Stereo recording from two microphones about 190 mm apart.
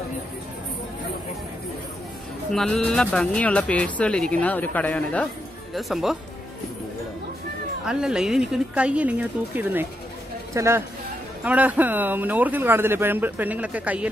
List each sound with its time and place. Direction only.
2.5 s speech: 5° left (ahead or behind)
7.8 s speech: 5° right (ahead or behind)